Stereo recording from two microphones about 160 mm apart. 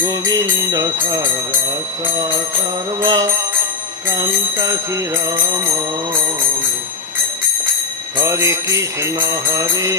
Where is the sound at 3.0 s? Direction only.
20° right (ahead or behind).